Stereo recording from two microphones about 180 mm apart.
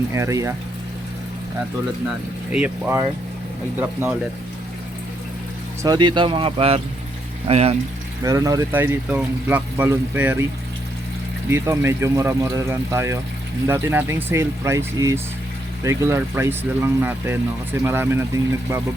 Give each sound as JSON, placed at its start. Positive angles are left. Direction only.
{"t": 0.1, "sound": "speech", "side_deg": -15}
{"t": 2.5, "sound": "speech", "side_deg": -10}
{"t": 5.8, "sound": "speech", "side_deg": -25}
{"t": 8.2, "sound": "speech", "side_deg": -20}
{"t": 11.4, "sound": "speech", "side_deg": -15}